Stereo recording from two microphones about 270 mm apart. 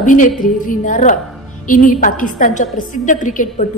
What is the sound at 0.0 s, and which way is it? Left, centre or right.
A woman's voice, left.